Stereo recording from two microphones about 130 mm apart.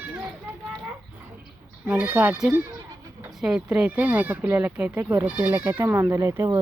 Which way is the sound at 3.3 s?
5° right (ahead or behind).